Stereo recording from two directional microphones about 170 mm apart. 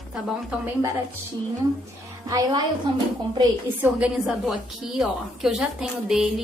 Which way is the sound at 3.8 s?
5° right (ahead or behind).